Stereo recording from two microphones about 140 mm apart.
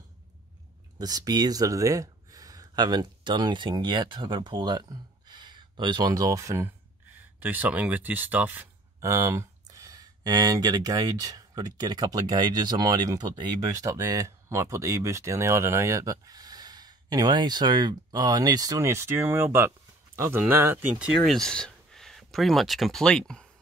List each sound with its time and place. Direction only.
0.9 s speech: 30° right (ahead or behind)
21.0 s speech: centre (ahead or behind)